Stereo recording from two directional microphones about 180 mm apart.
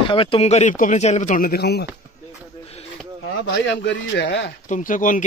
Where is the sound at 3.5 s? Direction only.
70° left (ahead or behind).